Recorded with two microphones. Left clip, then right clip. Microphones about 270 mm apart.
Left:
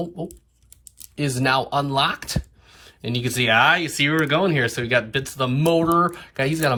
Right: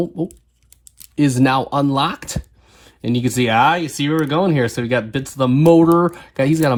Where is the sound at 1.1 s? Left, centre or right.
Right.